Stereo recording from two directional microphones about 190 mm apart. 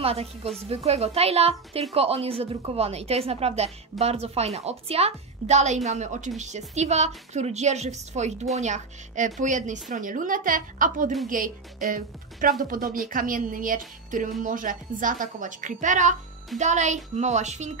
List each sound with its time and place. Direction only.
0.0 s a woman's voice: 30° right (ahead or behind)